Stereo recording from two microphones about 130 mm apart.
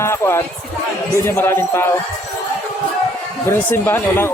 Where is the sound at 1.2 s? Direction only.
20° left (ahead or behind).